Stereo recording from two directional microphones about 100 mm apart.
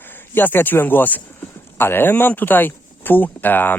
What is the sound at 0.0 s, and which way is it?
Speech, 20° left (ahead or behind).